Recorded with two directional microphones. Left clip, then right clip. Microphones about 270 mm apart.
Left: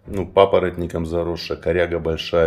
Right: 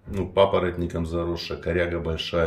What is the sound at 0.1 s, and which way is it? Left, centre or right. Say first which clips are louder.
Speech: left 5 dB; centre.